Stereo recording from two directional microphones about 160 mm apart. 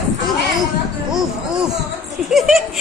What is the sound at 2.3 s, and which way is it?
Speech, centre (ahead or behind).